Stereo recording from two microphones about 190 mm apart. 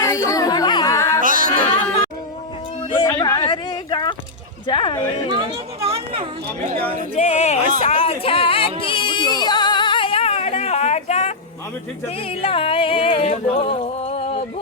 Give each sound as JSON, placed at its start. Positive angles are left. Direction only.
{"t": 0.0, "sound": "chatter", "side_deg": 15}
{"t": 1.2, "sound": "music", "side_deg": -45}
{"t": 3.2, "sound": "a sound", "side_deg": 25}
{"t": 4.6, "sound": "music", "side_deg": 25}
{"t": 5.3, "sound": "speech", "side_deg": -30}
{"t": 7.2, "sound": "music", "side_deg": 35}
{"t": 7.9, "sound": "a sound", "side_deg": 30}
{"t": 12.0, "sound": "music", "side_deg": 30}